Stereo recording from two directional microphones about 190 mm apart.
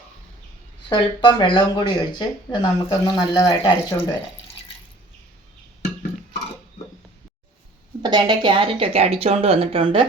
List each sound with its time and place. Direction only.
0.9 s speech: 25° left (ahead or behind)
8.0 s speech: 20° right (ahead or behind)